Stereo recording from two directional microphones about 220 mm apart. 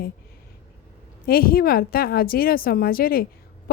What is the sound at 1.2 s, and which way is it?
A woman's voice, 45° left (ahead or behind).